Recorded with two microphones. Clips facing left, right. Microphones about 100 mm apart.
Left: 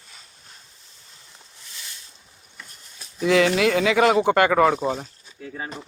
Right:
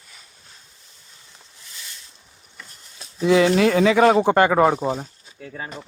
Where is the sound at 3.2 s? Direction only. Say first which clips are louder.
Right 2 dB; 30° right (ahead or behind).